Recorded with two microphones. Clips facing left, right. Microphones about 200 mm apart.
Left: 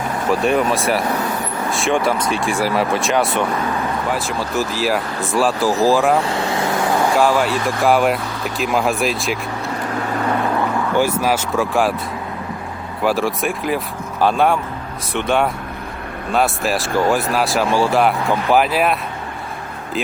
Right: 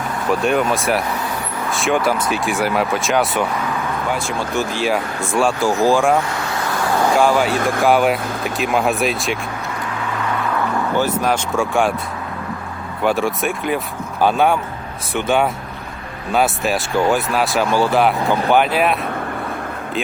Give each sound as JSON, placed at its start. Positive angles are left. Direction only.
{"t": 0.3, "sound": "speech", "side_deg": 0}
{"t": 6.2, "sound": "vehicle", "side_deg": 25}
{"t": 7.2, "sound": "speech", "side_deg": 0}
{"t": 7.5, "sound": "speech", "side_deg": -50}
{"t": 7.8, "sound": "speech", "side_deg": 0}
{"t": 10.9, "sound": "speech", "side_deg": 10}
{"t": 13.0, "sound": "speech", "side_deg": 0}